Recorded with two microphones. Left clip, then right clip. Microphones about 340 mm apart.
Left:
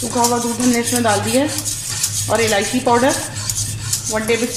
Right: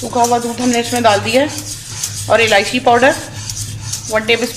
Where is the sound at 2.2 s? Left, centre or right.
Right.